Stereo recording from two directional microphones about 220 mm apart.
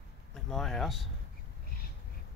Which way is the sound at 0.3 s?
Centre (ahead or behind).